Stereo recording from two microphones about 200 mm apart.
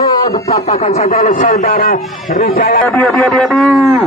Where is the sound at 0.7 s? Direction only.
35° left (ahead or behind).